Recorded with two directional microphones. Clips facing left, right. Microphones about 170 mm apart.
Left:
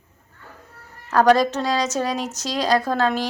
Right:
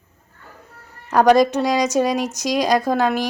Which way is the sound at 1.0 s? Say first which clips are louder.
Right 2 dB; 15° right (ahead or behind).